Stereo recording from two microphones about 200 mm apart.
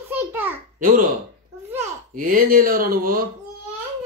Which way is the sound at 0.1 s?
10° right (ahead or behind).